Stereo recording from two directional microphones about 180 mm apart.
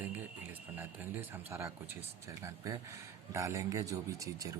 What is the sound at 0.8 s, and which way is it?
Speech, 10° right (ahead or behind).